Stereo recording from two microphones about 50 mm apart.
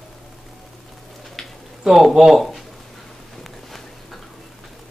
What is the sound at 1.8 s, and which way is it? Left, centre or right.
Speech, centre.